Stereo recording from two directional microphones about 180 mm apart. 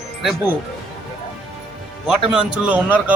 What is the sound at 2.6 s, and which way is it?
Speech, 10° right (ahead or behind).